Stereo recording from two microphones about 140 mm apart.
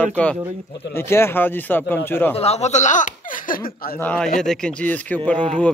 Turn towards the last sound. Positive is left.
turn(degrees=10)  # may be behind; listen again after turning